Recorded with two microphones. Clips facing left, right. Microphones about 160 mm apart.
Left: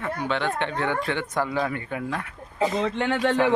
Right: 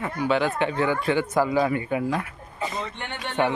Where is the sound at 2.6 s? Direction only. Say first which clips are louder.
Left 7 dB; 90° left.